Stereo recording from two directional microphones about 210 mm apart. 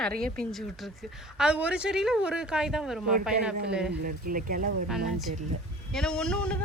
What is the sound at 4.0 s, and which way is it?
Speech, 45° right (ahead or behind).